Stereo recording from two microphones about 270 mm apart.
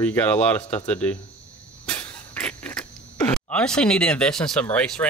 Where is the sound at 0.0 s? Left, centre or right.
Centre.